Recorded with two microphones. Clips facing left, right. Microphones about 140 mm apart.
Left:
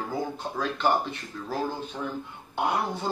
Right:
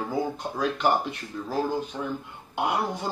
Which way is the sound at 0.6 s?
10° right (ahead or behind).